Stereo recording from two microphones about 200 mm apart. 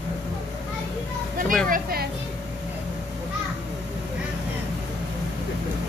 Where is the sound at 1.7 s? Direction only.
50° right (ahead or behind).